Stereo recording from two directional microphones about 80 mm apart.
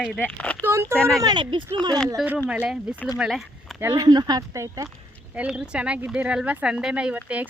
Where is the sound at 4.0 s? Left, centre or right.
Right.